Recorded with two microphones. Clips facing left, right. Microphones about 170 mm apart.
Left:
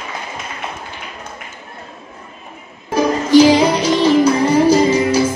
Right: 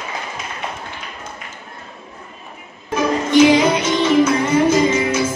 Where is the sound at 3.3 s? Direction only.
35° left (ahead or behind).